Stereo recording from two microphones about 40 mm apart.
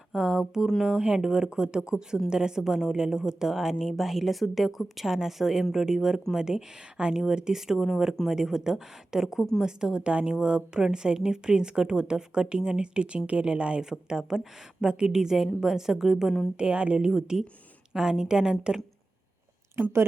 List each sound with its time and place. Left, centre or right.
0.1 s a sound: centre
1.1 s a woman's voice: right
14.1 s a woman's voice: centre
16.6 s speech: right
17.1 s a woman's voice: centre